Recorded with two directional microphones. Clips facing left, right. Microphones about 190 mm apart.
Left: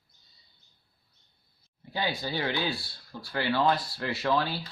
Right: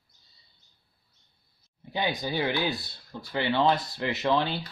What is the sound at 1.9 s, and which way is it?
Speech, 20° right (ahead or behind).